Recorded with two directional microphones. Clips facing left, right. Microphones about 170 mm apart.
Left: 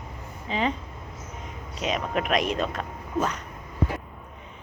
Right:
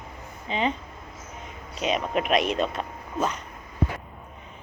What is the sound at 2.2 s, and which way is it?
Speech, 40° left (ahead or behind).